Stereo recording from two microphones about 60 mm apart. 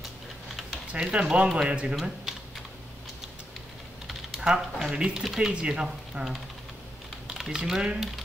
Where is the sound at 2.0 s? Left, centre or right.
Centre.